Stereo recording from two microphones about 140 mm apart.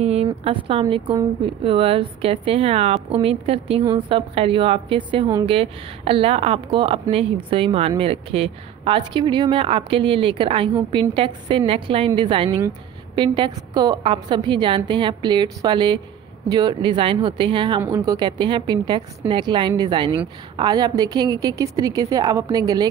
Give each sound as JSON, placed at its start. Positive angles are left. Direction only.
{"t": 0.0, "sound": "a woman's voice", "side_deg": -45}